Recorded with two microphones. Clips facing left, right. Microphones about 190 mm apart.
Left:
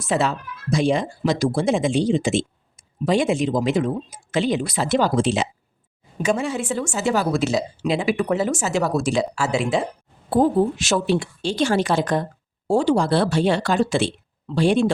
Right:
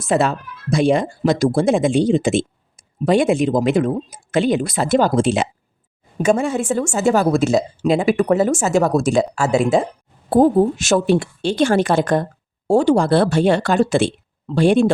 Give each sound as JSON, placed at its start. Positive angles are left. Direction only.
{"t": 0.0, "sound": "speech", "side_deg": -50}